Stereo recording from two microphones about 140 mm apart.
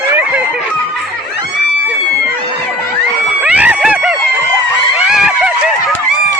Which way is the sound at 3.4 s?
10° right (ahead or behind).